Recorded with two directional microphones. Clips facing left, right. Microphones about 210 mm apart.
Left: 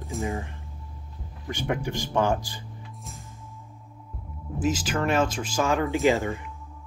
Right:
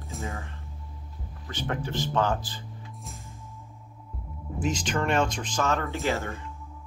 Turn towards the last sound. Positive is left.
turn(degrees=15)  # may be behind; listen again after turning